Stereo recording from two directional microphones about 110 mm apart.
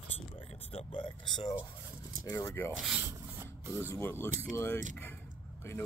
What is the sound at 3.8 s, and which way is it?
Speech, 20° left (ahead or behind).